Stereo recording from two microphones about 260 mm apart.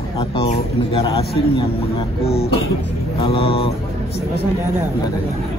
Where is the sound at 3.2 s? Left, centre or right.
Left.